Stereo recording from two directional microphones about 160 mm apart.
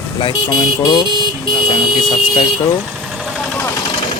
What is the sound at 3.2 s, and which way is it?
Vehicle, centre (ahead or behind).